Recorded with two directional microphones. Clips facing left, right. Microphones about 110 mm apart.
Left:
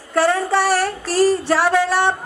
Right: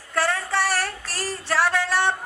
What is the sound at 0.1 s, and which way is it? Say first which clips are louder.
A woman's voice: left 7 dB; 15° left (ahead or behind).